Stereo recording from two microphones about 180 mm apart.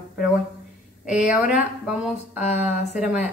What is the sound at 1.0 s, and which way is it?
A woman's voice, 5° right (ahead or behind).